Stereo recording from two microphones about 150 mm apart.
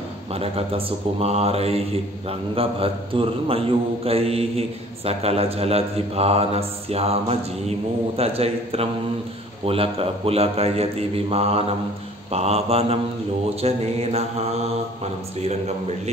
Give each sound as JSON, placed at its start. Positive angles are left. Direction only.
{"t": 0.3, "sound": "speech", "side_deg": -40}
{"t": 8.2, "sound": "mantra", "side_deg": -40}
{"t": 9.7, "sound": "speech", "side_deg": -40}
{"t": 12.3, "sound": "mantra", "side_deg": -45}